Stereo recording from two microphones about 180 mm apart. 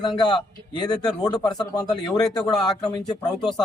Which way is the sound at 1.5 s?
5° left (ahead or behind).